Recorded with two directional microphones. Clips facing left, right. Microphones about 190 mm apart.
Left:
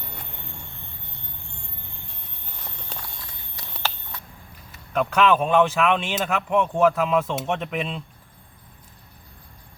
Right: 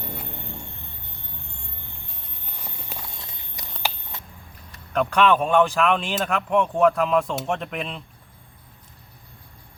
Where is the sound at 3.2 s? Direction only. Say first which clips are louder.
Right 1 dB; 20° right (ahead or behind).